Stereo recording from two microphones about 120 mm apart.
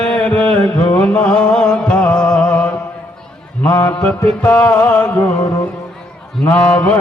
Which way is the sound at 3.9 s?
10° left (ahead or behind).